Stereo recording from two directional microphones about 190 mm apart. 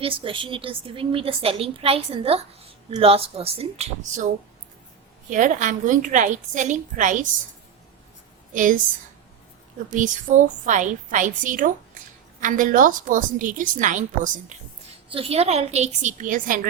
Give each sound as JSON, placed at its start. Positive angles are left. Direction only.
{"t": 0.0, "sound": "a woman's voice", "side_deg": -30}
{"t": 5.3, "sound": "a woman's voice", "side_deg": -40}
{"t": 8.5, "sound": "a woman's voice", "side_deg": -45}
{"t": 9.9, "sound": "a woman's voice", "side_deg": -40}
{"t": 15.1, "sound": "a woman's voice", "side_deg": -30}